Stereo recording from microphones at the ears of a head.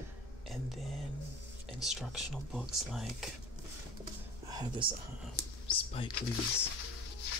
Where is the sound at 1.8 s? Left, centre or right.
Centre.